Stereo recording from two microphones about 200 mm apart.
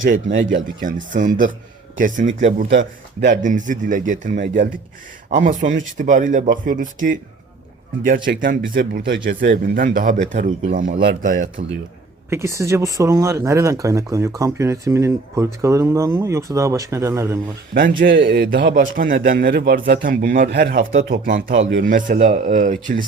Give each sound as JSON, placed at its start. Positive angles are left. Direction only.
{"t": 0.0, "sound": "a man's voice", "side_deg": -40}
{"t": 12.3, "sound": "speech", "side_deg": -15}
{"t": 18.2, "sound": "a man's voice", "side_deg": -55}
{"t": 21.5, "sound": "a man's voice", "side_deg": -70}
{"t": 21.8, "sound": "speech", "side_deg": -40}